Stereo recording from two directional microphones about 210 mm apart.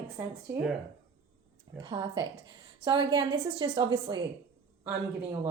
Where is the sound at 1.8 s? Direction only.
20° right (ahead or behind).